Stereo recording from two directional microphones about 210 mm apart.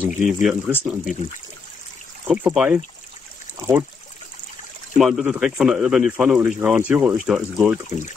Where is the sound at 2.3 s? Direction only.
5° right (ahead or behind).